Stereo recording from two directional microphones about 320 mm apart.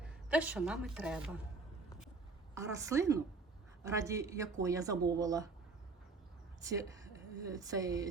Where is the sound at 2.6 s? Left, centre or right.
Centre.